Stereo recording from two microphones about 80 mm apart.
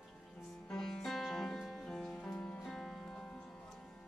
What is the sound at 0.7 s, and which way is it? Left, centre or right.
Music, centre.